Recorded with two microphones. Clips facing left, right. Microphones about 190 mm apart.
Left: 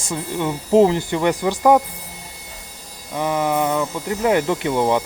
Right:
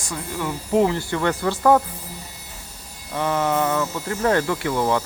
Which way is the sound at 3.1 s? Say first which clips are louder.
Left 1 dB; 15° left (ahead or behind).